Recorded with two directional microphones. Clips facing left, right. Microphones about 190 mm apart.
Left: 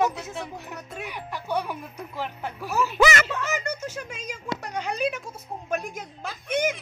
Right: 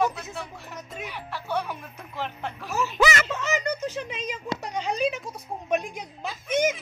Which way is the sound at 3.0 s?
55° left (ahead or behind).